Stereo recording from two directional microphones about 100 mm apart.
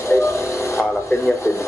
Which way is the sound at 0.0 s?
25° left (ahead or behind).